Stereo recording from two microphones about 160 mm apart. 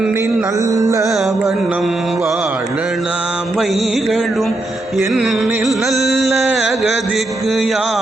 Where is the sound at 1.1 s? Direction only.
Centre (ahead or behind).